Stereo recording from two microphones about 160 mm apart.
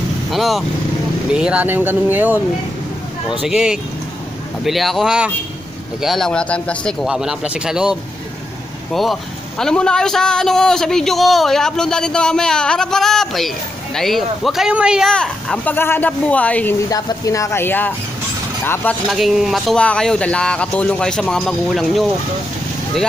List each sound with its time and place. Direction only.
0.3 s a man's voice: centre (ahead or behind)
3.4 s a man's voice: 5° right (ahead or behind)
16.9 s speech: 20° left (ahead or behind)
19.0 s a man's voice: centre (ahead or behind)